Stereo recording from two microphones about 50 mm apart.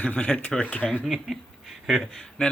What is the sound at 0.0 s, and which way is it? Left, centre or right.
Speech, left.